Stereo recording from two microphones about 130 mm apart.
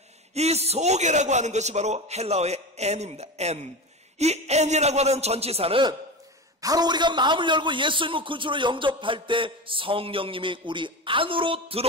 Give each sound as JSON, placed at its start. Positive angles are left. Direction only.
{"t": 0.3, "sound": "a man's voice", "side_deg": -55}
{"t": 6.6, "sound": "a man's voice", "side_deg": -30}